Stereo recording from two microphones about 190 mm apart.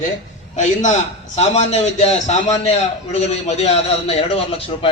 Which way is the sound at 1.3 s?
35° left (ahead or behind).